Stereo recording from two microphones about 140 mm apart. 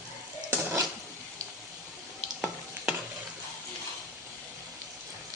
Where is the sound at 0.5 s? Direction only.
20° right (ahead or behind).